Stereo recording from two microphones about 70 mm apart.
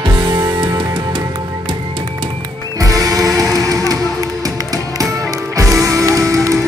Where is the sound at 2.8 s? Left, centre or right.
Right.